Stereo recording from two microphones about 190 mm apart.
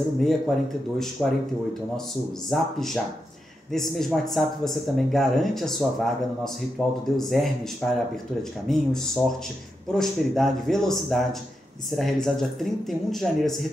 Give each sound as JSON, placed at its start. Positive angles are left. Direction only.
{"t": 0.2, "sound": "speech", "side_deg": 0}
{"t": 2.5, "sound": "speech", "side_deg": 0}